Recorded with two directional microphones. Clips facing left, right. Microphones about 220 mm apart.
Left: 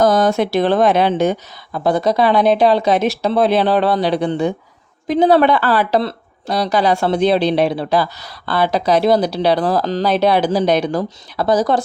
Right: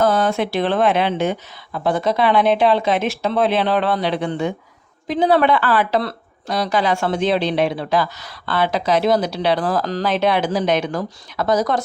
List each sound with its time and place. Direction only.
0.0 s speech: 40° left (ahead or behind)